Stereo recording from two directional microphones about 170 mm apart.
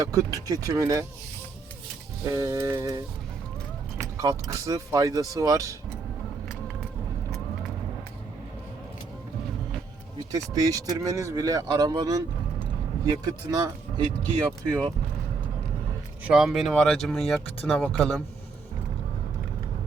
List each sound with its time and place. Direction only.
0.0 s speech: 20° right (ahead or behind)
2.2 s speech: 20° right (ahead or behind)
4.0 s speech: 20° right (ahead or behind)
10.3 s speech: 20° right (ahead or behind)
13.2 s speech: 20° right (ahead or behind)
14.7 s speech: 10° left (ahead or behind)
16.2 s speech: 5° right (ahead or behind)